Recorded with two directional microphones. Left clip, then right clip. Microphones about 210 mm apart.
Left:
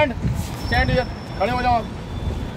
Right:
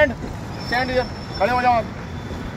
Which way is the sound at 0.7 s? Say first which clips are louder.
Even; 5° right (ahead or behind).